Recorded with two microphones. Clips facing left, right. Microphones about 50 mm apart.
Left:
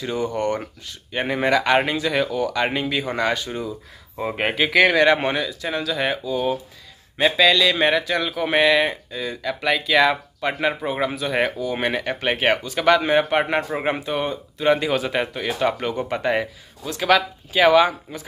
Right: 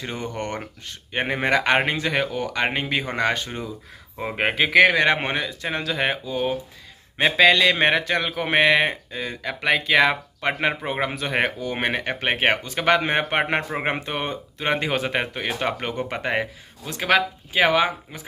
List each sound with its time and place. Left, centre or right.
0.0 s speech: right
4.2 s speech: centre